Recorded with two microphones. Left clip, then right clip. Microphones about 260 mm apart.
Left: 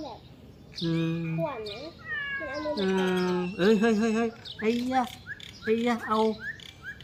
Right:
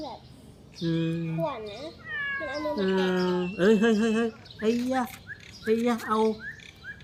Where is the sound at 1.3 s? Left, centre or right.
Right.